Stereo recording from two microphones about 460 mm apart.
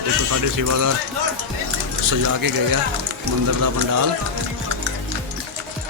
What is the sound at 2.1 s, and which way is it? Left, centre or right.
Speech, right.